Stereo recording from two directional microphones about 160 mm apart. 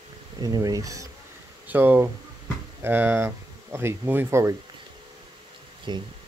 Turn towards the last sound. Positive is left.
turn(degrees=-30)  # may be behind; listen again after turning